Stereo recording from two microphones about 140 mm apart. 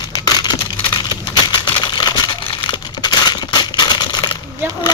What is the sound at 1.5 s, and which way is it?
Crumpling, 30° left (ahead or behind).